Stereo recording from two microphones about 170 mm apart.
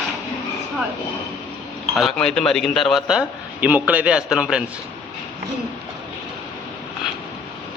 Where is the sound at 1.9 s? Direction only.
Centre (ahead or behind).